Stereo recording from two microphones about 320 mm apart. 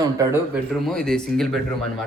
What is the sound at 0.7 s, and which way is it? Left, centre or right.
Speech, centre.